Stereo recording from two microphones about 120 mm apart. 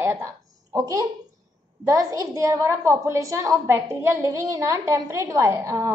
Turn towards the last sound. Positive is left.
turn(degrees=-25)  # may be behind; listen again after turning